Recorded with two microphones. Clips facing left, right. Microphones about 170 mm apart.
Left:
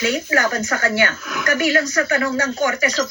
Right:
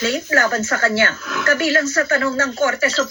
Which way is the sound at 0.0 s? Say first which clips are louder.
Right 1 dB; 15° left (ahead or behind).